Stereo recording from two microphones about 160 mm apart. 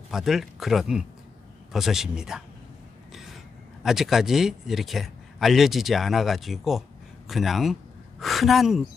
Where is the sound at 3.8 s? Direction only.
Centre (ahead or behind).